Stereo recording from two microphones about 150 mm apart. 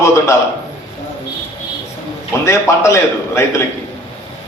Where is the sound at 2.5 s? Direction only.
20° left (ahead or behind).